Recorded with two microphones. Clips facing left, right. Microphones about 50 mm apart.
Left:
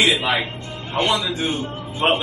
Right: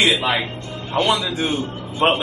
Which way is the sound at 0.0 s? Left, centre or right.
Centre.